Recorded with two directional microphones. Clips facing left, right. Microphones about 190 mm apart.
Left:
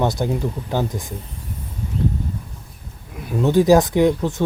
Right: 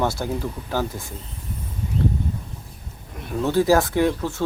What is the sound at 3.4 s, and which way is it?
Speech, 15° left (ahead or behind).